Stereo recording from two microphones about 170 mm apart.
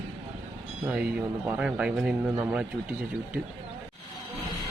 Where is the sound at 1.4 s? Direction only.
5° right (ahead or behind).